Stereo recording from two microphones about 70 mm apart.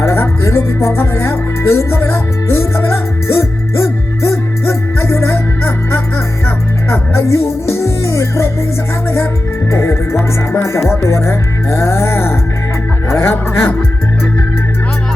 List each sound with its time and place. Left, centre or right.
0.0 s music: left
9.7 s music: left